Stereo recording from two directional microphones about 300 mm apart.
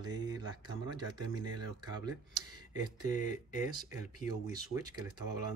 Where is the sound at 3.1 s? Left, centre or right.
Left.